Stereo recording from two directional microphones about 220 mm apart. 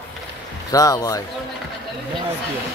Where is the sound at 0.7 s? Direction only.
15° left (ahead or behind).